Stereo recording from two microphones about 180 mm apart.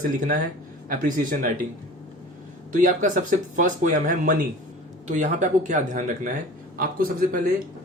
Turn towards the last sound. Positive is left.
turn(degrees=-50)  # may be behind; listen again after turning